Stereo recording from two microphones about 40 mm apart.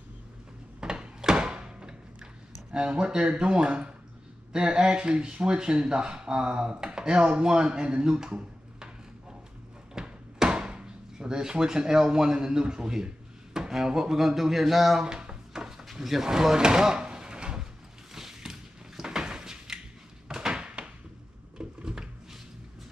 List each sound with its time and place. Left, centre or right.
0.7 s a sound: right
2.7 s speech: right
9.9 s speech: right
15.0 s drawer open or close: centre
15.8 s drawer open or close: centre; by 17.6 s right
18.1 s a sound: centre
21.5 s drawer open or close: right